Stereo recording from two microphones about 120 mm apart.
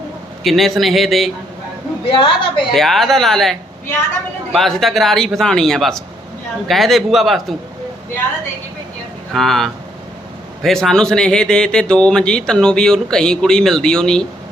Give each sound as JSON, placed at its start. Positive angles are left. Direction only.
{"t": 0.4, "sound": "speech", "side_deg": 0}
{"t": 2.0, "sound": "a woman's voice", "side_deg": 45}
{"t": 2.7, "sound": "speech", "side_deg": 0}
{"t": 9.3, "sound": "speech", "side_deg": 0}